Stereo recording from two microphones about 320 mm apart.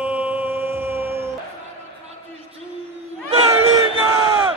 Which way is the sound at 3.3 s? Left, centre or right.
Centre.